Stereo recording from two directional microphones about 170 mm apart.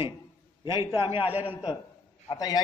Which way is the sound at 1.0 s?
30° left (ahead or behind).